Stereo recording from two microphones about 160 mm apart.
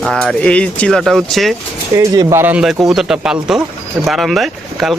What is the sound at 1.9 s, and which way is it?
Speech, 20° right (ahead or behind).